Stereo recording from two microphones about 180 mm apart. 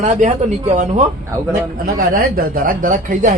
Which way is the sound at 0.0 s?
40° right (ahead or behind).